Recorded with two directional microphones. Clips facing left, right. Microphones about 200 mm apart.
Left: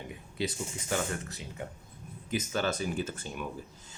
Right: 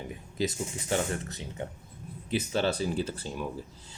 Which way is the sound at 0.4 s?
35° right (ahead or behind).